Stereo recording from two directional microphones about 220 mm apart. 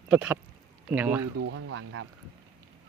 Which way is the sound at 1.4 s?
65° right (ahead or behind).